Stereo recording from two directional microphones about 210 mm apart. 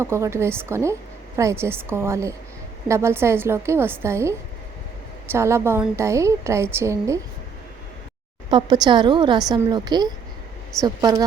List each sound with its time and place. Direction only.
0.0 s a woman's voice: 15° right (ahead or behind)
8.4 s a woman's voice: 20° right (ahead or behind)